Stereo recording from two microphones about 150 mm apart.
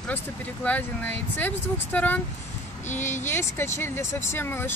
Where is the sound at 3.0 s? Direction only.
55° left (ahead or behind).